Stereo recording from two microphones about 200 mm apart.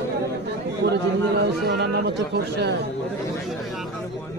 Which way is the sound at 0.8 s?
60° right (ahead or behind).